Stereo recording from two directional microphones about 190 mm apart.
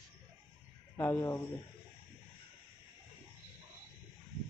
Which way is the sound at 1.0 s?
15° left (ahead or behind).